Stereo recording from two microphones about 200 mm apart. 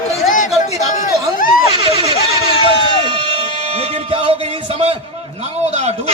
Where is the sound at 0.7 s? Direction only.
40° left (ahead or behind).